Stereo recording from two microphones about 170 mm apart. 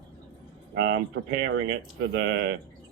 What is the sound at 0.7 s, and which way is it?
Speech, 90° right.